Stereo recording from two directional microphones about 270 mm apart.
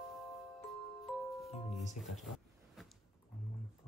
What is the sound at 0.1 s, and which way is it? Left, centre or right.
Glockenspiel, centre.